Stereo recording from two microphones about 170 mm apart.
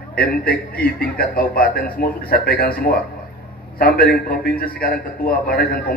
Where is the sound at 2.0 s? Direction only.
60° left (ahead or behind).